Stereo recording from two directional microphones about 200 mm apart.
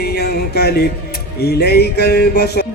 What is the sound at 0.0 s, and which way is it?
Music, 50° left (ahead or behind).